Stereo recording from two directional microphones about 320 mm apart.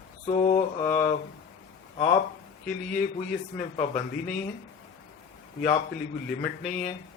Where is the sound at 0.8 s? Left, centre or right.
Centre.